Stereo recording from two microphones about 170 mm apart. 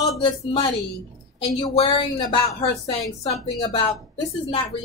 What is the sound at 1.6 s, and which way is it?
Speech, 30° left (ahead or behind).